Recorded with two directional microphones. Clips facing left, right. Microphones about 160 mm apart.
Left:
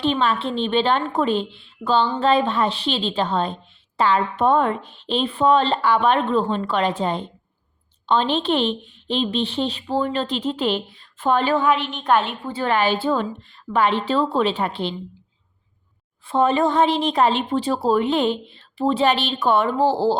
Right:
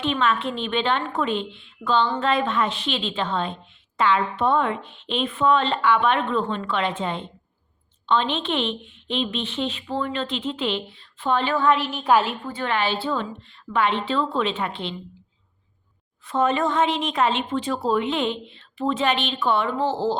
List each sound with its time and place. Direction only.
0.0 s a woman's voice: 35° left (ahead or behind)
11.7 s a woman's voice: 5° right (ahead or behind)
12.5 s a woman's voice: 35° left (ahead or behind)
16.2 s a woman's voice: 30° left (ahead or behind)